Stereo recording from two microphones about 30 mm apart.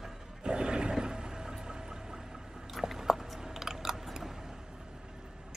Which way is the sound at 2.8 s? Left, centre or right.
Centre.